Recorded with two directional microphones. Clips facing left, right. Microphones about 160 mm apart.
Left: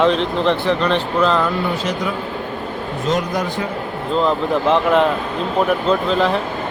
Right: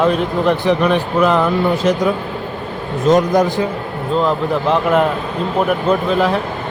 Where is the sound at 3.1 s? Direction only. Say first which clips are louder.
Right 8 dB; 45° right (ahead or behind).